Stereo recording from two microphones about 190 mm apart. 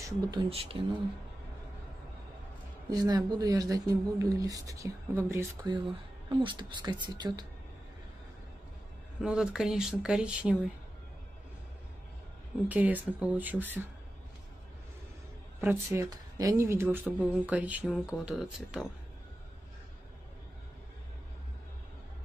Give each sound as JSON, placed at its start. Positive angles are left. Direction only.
{"t": 0.0, "sound": "speech", "side_deg": -25}
{"t": 2.9, "sound": "speech", "side_deg": -20}
{"t": 9.2, "sound": "speech", "side_deg": -5}
{"t": 12.6, "sound": "speech", "side_deg": -10}
{"t": 15.6, "sound": "speech", "side_deg": -10}